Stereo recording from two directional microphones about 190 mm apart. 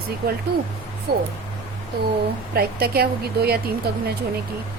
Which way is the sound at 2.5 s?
55° right (ahead or behind).